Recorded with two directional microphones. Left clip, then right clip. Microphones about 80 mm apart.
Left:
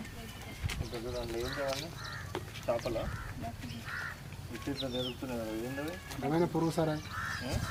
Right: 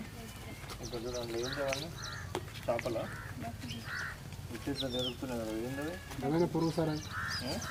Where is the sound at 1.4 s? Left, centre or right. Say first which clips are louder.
Even; left.